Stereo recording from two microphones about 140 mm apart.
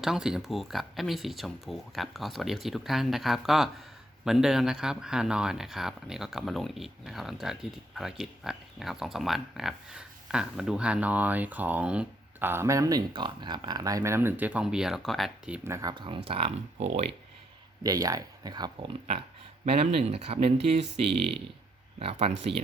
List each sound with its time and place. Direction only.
0.0 s speech: 5° right (ahead or behind)
15.6 s speech: 20° right (ahead or behind); by 17.1 s 50° right (ahead or behind)
17.8 s speech: 25° right (ahead or behind)
19.6 s speech: 45° right (ahead or behind)